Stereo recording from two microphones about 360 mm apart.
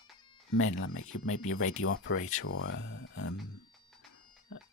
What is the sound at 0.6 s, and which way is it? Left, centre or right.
Speech, left.